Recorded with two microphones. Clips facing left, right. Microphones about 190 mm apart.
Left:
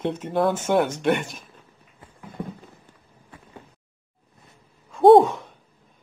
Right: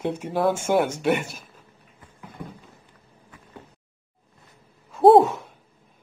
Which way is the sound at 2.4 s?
30° left (ahead or behind).